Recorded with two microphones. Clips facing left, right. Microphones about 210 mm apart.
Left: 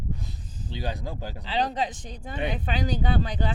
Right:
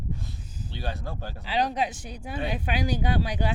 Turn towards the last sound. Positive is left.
turn(degrees=-10)  # may be behind; listen again after turning